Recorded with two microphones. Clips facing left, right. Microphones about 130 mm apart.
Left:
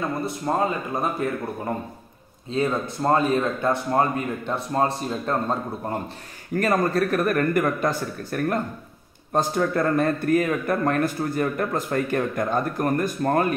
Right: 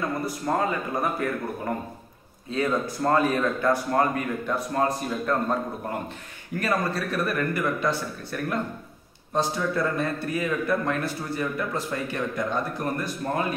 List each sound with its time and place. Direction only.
0.2 s speech: 25° left (ahead or behind)
2.5 s speech: 25° left (ahead or behind)
6.5 s a man's voice: 45° left (ahead or behind)